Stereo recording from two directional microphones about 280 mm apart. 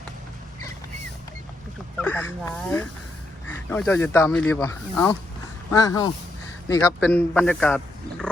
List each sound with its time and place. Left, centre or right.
2.0 s a man's voice: centre